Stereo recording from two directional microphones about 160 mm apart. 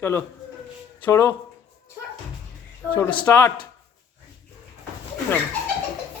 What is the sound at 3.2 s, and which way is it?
Speech, 15° left (ahead or behind).